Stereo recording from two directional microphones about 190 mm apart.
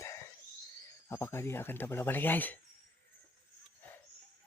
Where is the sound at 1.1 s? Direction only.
10° left (ahead or behind).